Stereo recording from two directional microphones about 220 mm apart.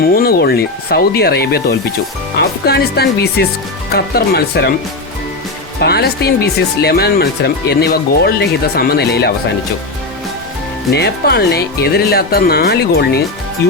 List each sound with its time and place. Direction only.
0.1 s speech: 45° left (ahead or behind)
5.8 s speech: 45° left (ahead or behind)
10.9 s speech: 50° left (ahead or behind)